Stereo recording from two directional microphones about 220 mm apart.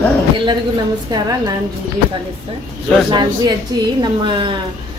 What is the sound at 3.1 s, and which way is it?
Speech, 20° right (ahead or behind).